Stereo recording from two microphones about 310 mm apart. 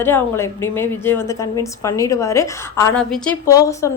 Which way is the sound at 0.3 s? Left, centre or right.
Centre.